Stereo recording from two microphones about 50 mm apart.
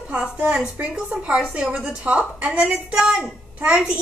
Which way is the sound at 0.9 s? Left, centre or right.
Centre.